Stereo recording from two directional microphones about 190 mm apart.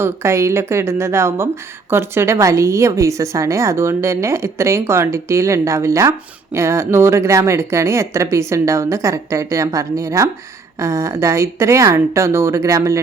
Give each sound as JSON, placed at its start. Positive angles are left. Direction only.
{"t": 0.0, "sound": "a woman's voice", "side_deg": -15}